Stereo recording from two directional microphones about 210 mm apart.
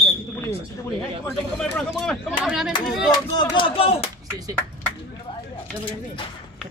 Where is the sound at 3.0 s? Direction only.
20° left (ahead or behind).